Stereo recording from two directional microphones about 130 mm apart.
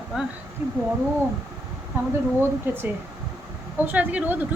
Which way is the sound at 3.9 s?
10° right (ahead or behind).